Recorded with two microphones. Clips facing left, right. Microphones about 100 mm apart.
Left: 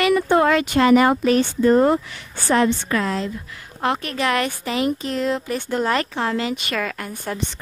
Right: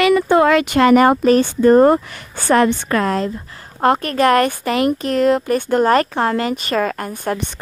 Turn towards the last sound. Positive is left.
turn(degrees=-50)  # may be behind; listen again after turning